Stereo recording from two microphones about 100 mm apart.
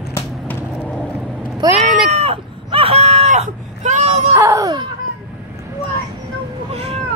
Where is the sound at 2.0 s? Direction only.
85° right.